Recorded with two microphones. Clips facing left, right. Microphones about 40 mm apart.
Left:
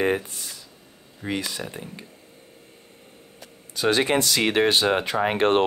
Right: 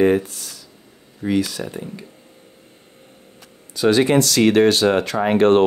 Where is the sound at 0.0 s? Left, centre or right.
Centre.